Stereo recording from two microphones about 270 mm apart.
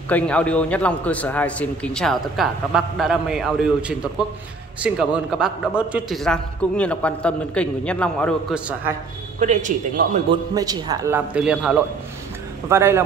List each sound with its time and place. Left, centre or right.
0.1 s a man's voice: centre
9.4 s a man's voice: right
10.5 s a man's voice: centre